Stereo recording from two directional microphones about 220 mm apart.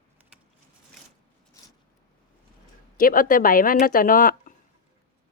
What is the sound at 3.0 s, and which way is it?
Speech, 40° left (ahead or behind).